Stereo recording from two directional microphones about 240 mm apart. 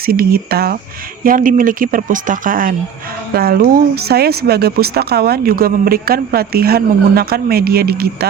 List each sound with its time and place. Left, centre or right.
0.0 s speech: right